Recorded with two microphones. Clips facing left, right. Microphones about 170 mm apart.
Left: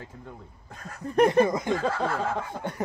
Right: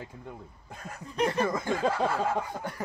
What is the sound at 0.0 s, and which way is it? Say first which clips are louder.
Speech: right 1 dB; 10° right (ahead or behind).